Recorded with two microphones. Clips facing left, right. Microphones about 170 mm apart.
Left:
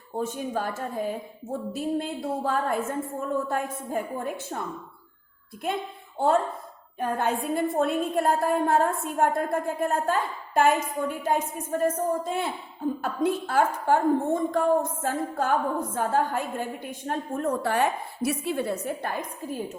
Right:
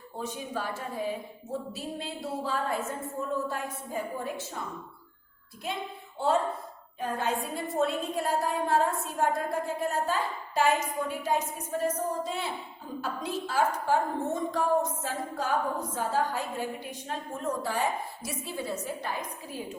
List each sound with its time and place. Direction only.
0.2 s a woman's voice: 50° left (ahead or behind)
5.6 s a woman's voice: 55° left (ahead or behind)